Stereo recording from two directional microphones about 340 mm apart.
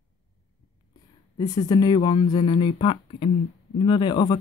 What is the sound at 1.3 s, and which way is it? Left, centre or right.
Speech, centre.